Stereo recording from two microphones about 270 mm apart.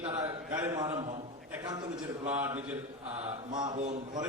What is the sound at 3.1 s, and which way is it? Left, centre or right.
Mantra, right.